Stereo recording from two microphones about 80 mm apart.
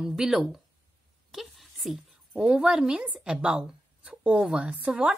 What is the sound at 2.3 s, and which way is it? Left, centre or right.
A woman's voice, centre.